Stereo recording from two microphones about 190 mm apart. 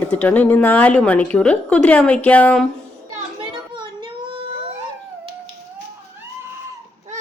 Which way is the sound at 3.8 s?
25° right (ahead or behind).